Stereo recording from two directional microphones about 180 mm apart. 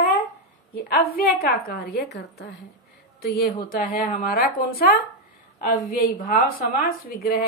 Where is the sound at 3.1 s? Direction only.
60° left (ahead or behind).